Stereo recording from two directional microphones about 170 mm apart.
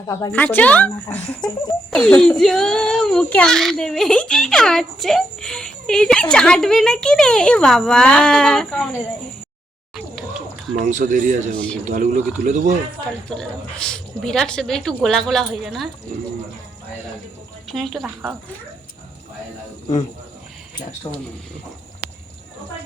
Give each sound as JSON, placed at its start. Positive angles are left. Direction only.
{"t": 0.3, "sound": "speech", "side_deg": 10}
{"t": 1.9, "sound": "a child's voice", "side_deg": 5}
{"t": 10.8, "sound": "speech", "side_deg": -50}
{"t": 13.3, "sound": "a child's voice", "side_deg": 5}
{"t": 17.7, "sound": "a child's voice", "side_deg": 0}